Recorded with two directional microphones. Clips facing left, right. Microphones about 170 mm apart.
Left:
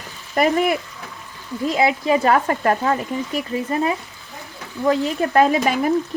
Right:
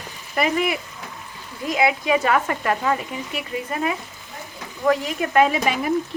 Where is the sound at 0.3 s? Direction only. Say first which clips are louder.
Left 4 dB; 45° left (ahead or behind).